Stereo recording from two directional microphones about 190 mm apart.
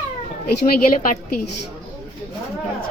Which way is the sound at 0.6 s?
45° left (ahead or behind).